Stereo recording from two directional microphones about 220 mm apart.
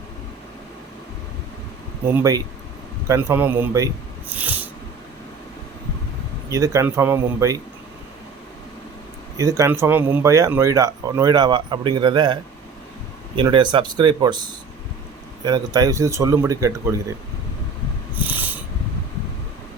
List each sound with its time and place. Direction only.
2.1 s speech: 15° right (ahead or behind)
4.3 s snort: 5° right (ahead or behind)
6.5 s speech: 15° right (ahead or behind)
9.4 s speech: 15° right (ahead or behind)
15.4 s speech: 15° right (ahead or behind)
18.1 s a sound: 10° right (ahead or behind)